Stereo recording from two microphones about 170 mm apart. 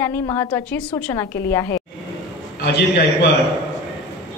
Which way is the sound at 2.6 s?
70° left (ahead or behind).